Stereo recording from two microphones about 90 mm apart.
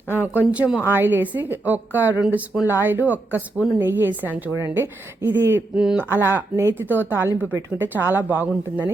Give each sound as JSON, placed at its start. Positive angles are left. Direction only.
{"t": 0.1, "sound": "a woman's voice", "side_deg": -20}
{"t": 2.2, "sound": "speech", "side_deg": -10}
{"t": 2.6, "sound": "a woman's voice", "side_deg": -20}
{"t": 5.7, "sound": "speech", "side_deg": -10}
{"t": 6.1, "sound": "a woman's voice", "side_deg": -25}